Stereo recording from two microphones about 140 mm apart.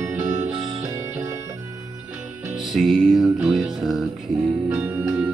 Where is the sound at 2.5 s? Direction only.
Centre (ahead or behind).